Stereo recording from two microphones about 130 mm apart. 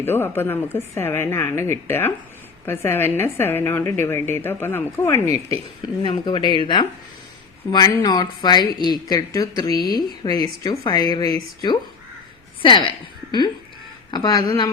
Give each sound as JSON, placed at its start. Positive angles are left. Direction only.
{"t": 0.0, "sound": "a woman's voice", "side_deg": 15}
{"t": 6.0, "sound": "speech", "side_deg": 40}
{"t": 14.1, "sound": "speech", "side_deg": 30}